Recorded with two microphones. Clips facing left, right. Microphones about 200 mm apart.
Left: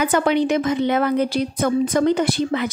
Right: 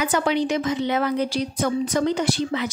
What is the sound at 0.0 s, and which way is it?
A woman's voice, 55° left (ahead or behind).